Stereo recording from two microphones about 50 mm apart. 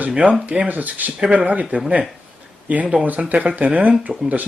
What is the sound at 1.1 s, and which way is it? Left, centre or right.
Speech, centre.